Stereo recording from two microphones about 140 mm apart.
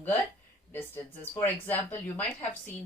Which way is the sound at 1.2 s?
15° left (ahead or behind).